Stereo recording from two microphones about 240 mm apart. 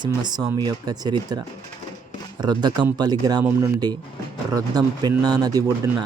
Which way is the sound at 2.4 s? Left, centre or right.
Centre.